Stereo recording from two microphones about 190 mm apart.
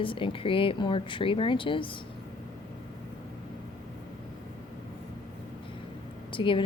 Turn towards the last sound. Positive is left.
turn(degrees=25)  # may be behind; listen again after turning